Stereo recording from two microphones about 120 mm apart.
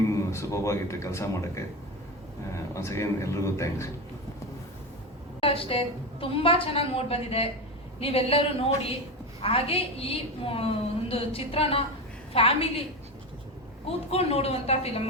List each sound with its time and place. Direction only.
0.3 s a man's voice: 25° left (ahead or behind)
5.4 s a woman's voice: 50° left (ahead or behind)
13.8 s a woman's voice: 55° left (ahead or behind)